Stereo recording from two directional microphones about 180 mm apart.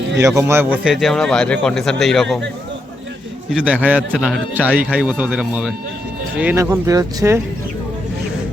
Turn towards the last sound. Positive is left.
turn(degrees=-20)  # may be behind; listen again after turning